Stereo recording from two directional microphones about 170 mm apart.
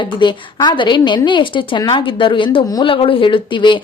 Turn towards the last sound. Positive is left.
turn(degrees=30)  # may be behind; listen again after turning